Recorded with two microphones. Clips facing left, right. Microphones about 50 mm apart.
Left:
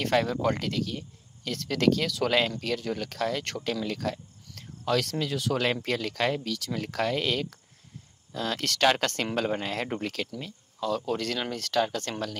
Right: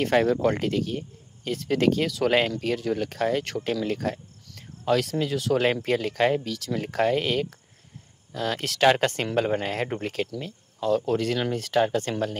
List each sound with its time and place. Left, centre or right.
0.0 s speech: centre
4.6 s speech: centre
5.9 s speech: centre
6.4 s speech: centre
6.8 s speech: centre
8.6 s speech: centre